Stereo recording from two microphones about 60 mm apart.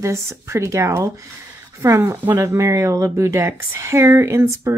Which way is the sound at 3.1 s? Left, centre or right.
Right.